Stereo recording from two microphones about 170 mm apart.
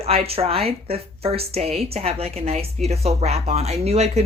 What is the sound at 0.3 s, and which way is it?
Speech, 35° right (ahead or behind).